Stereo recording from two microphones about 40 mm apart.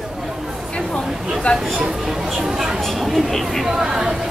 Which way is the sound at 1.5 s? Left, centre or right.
Left.